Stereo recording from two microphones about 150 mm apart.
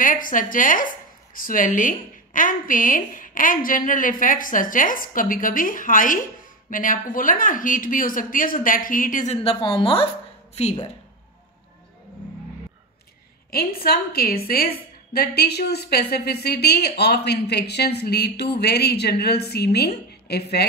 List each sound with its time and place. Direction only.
0.0 s speech: 65° left (ahead or behind); by 10.0 s 35° left (ahead or behind)
10.5 s speech: 45° left (ahead or behind)
13.5 s a woman's voice: 90° left